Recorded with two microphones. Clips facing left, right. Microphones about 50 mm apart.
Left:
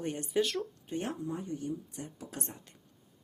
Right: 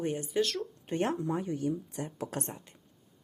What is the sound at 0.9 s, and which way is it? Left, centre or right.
Speech, right.